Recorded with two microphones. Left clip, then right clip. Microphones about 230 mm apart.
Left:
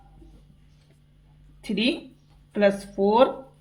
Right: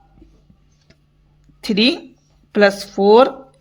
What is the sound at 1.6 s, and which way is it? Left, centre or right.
Speech, right.